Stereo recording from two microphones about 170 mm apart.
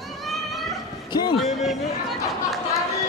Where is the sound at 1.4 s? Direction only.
Centre (ahead or behind).